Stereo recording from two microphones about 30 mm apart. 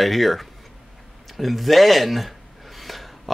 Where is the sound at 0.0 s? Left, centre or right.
Centre.